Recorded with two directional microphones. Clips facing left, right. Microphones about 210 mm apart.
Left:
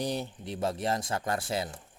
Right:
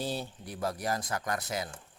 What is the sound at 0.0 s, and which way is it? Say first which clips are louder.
Speech: left 3 dB; 20° left (ahead or behind).